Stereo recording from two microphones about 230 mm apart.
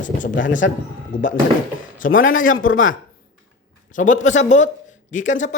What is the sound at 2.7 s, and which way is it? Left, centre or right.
Speech, left.